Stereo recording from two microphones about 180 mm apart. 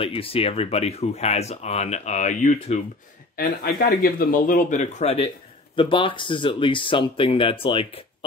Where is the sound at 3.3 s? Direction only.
55° left (ahead or behind).